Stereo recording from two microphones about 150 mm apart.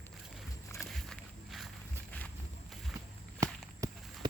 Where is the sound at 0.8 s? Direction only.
Centre (ahead or behind).